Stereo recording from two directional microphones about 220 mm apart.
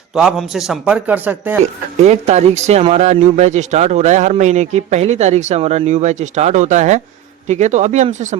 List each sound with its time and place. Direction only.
0.1 s a man's voice: centre (ahead or behind)
2.0 s speech: 30° right (ahead or behind)